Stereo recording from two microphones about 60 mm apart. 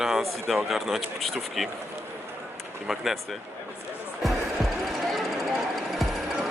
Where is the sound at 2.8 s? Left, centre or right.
Centre.